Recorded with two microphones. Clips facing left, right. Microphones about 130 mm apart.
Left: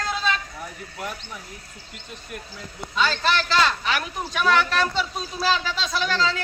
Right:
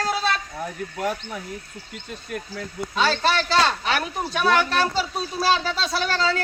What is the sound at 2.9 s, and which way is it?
A man's voice, 35° right (ahead or behind).